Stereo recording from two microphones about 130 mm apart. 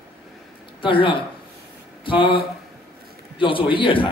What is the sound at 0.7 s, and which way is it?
A man's voice, 40° left (ahead or behind).